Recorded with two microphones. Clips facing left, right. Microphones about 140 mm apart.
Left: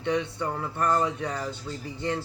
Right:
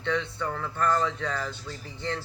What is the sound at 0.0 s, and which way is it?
Speech, 15° left (ahead or behind).